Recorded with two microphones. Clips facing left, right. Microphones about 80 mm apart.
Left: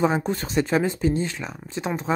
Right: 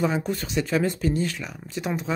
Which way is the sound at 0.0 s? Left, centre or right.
Left.